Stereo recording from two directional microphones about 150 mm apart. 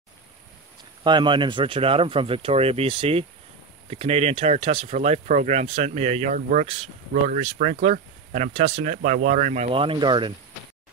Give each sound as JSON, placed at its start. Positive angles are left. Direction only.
{"t": 1.0, "sound": "speech", "side_deg": -30}
{"t": 7.5, "sound": "speech", "side_deg": -65}
{"t": 7.8, "sound": "speech", "side_deg": -50}
{"t": 8.5, "sound": "speech", "side_deg": -40}